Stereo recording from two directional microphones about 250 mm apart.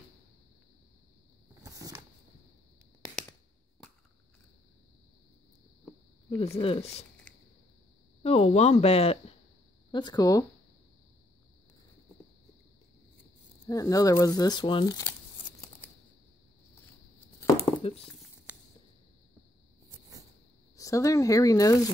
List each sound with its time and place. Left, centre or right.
1.5 s a sound: centre
6.3 s speech: left
8.2 s speech: left
13.7 s speech: centre
18.5 s a sound: centre
20.7 s speech: centre